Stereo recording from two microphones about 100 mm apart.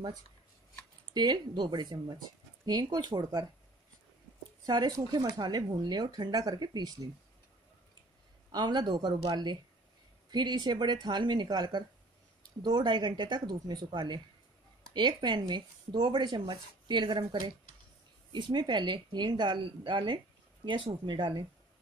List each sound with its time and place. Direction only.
1.1 s speech: 45° right (ahead or behind)
4.6 s speech: 45° right (ahead or behind)
8.5 s speech: 45° right (ahead or behind)